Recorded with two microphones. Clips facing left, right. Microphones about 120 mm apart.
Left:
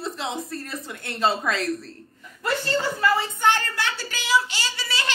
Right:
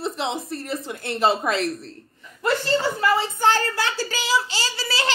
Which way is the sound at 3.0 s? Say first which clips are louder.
Right 1 dB; 30° right (ahead or behind).